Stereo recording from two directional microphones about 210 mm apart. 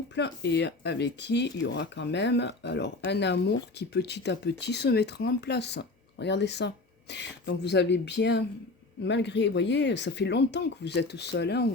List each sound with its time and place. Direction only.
0.1 s speech: 55° left (ahead or behind)